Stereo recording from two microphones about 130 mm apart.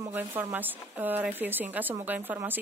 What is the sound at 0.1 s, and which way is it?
Speech, 15° right (ahead or behind).